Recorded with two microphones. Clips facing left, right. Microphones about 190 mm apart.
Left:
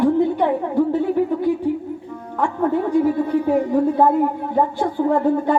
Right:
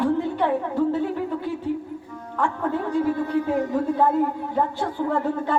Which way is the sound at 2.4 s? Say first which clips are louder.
Left 5 dB; 15° left (ahead or behind).